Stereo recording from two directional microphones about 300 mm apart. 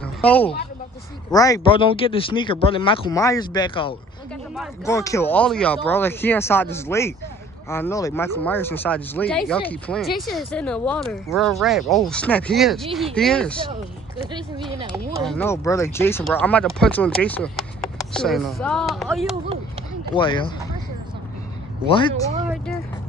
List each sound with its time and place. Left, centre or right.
0.0 s a sound: centre
1.3 s speech: centre
14.8 s speech: centre
15.2 s speech: centre
20.2 s speech: centre